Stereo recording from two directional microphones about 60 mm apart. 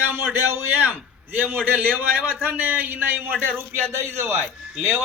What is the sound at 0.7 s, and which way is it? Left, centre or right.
A man's voice, right.